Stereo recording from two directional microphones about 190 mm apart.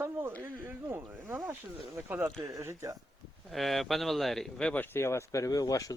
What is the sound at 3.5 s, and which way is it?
Speech, centre (ahead or behind).